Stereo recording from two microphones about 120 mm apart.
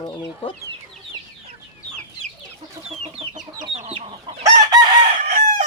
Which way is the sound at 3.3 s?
75° right (ahead or behind).